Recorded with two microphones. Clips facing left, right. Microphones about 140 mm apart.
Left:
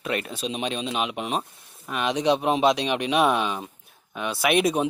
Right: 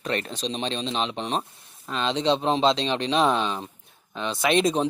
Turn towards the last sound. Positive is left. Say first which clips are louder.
# even
turn(degrees=5)  # may be behind; listen again after turning